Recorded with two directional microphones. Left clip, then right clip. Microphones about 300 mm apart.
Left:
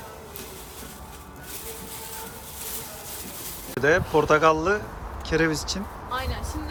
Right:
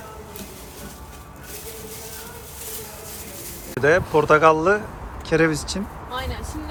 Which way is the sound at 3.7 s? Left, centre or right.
Centre.